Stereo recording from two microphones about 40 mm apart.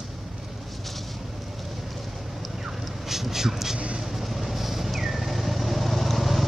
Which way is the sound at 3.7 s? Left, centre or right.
Right.